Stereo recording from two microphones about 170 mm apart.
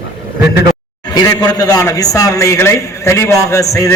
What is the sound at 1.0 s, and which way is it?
A man's voice, 20° left (ahead or behind).